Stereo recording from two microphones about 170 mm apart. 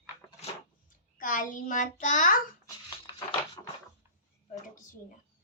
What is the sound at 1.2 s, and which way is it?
A child's voice, 50° left (ahead or behind).